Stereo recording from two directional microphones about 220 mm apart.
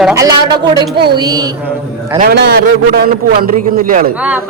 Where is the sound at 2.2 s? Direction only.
45° right (ahead or behind).